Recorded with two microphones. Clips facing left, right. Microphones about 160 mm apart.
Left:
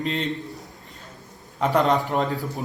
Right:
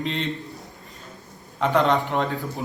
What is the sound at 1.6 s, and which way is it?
Speech, 5° left (ahead or behind).